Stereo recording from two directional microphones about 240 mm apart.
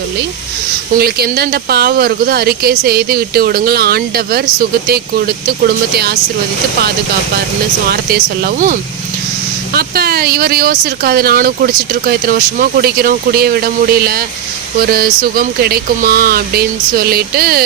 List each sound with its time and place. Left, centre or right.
0.9 s speech: right
7.9 s speech: right